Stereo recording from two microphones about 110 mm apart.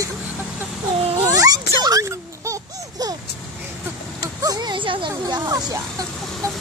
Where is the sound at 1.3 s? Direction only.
30° right (ahead or behind).